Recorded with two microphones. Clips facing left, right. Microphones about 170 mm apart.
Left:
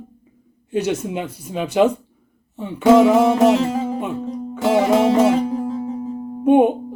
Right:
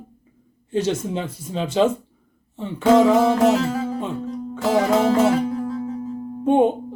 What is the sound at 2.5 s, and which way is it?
Music, 5° left (ahead or behind).